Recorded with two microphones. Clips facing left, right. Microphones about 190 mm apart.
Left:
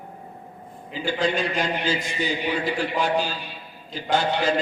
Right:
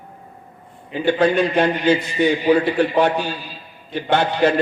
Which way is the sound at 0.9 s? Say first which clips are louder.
Right 8 dB; 60° right (ahead or behind).